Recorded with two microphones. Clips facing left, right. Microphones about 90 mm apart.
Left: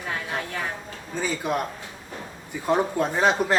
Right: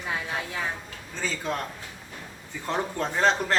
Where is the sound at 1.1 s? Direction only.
15° left (ahead or behind).